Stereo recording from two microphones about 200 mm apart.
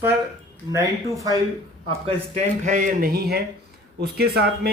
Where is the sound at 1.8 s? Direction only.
30° right (ahead or behind).